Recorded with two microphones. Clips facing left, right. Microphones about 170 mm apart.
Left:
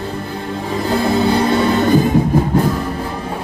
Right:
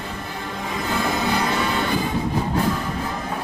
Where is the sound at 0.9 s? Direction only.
30° left (ahead or behind).